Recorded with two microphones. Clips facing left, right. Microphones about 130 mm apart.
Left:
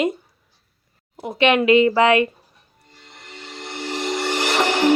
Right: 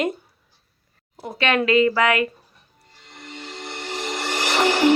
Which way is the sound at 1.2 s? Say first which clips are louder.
Left 4 dB; 20° left (ahead or behind).